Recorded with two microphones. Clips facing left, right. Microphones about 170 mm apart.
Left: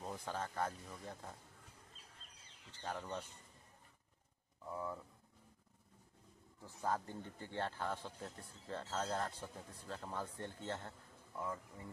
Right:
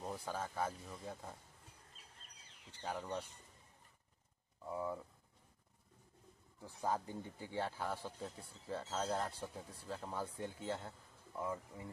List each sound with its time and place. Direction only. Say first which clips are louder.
0.0 s speech: right 1 dB; 5° right (ahead or behind)
2.7 s speech: right 2 dB; 10° right (ahead or behind)
4.6 s speech: right 3 dB; 15° right (ahead or behind)
6.6 s speech: right 1 dB; 15° right (ahead or behind)